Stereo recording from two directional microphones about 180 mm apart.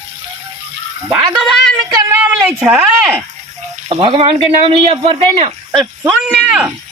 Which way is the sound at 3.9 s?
30° right (ahead or behind).